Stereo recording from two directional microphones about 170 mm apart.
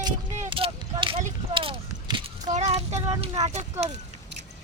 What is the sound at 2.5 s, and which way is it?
Child singing, 40° right (ahead or behind).